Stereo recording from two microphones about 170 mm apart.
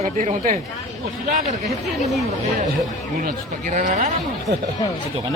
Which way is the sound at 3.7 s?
50° right (ahead or behind).